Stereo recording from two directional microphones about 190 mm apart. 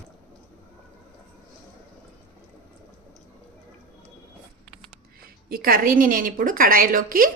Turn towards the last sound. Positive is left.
turn(degrees=-50)  # may be behind; listen again after turning